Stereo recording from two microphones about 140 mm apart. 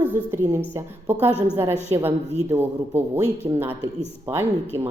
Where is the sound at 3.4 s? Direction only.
25° right (ahead or behind).